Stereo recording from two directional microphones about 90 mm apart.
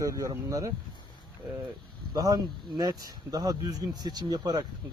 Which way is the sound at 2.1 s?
45° right (ahead or behind).